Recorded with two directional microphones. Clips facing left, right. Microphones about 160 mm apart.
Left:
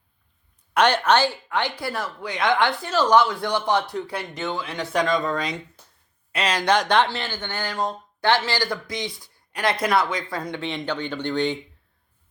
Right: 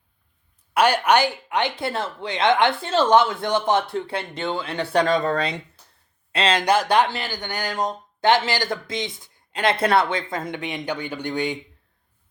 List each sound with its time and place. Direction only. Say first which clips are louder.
0.7 s speech: right 1 dB; 10° right (ahead or behind); by 5.3 s 35° right (ahead or behind)
6.3 s speech: right 3 dB; 25° right (ahead or behind)
6.7 s speech: left 1 dB; 10° right (ahead or behind)